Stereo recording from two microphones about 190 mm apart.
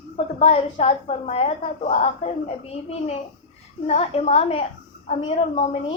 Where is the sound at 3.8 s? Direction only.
35° left (ahead or behind).